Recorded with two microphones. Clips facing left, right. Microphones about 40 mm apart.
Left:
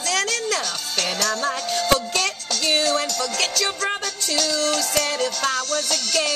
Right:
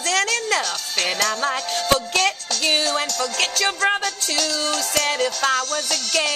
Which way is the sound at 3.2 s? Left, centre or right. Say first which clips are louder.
Right 2 dB; right.